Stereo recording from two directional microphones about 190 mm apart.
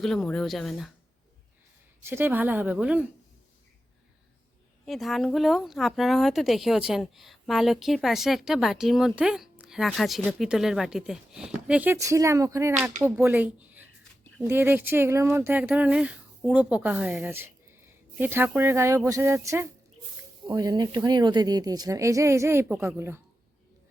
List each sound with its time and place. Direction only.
0.0 s a woman's voice: 5° left (ahead or behind)
2.0 s speech: 10° right (ahead or behind)
4.9 s a woman's voice: centre (ahead or behind)